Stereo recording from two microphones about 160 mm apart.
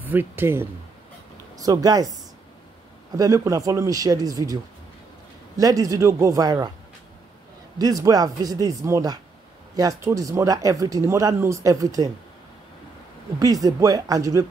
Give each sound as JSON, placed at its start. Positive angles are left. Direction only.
{"t": 0.0, "sound": "speech", "side_deg": -10}
{"t": 3.2, "sound": "speech", "side_deg": -20}
{"t": 5.6, "sound": "speech", "side_deg": -20}
{"t": 7.8, "sound": "speech", "side_deg": -25}
{"t": 13.4, "sound": "speech", "side_deg": -25}